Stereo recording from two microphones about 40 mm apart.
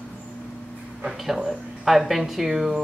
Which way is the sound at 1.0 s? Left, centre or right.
Centre.